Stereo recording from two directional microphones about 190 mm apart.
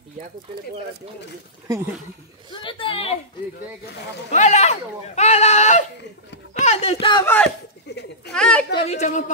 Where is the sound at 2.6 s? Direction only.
30° left (ahead or behind).